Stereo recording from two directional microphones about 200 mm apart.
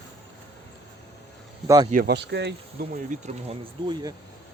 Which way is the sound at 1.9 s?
50° right (ahead or behind).